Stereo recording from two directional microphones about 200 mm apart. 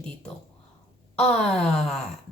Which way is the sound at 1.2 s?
5° left (ahead or behind).